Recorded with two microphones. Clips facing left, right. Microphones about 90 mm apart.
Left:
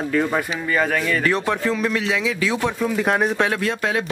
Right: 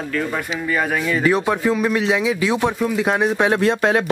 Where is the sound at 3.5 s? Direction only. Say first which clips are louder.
Right 6 dB; 30° right (ahead or behind).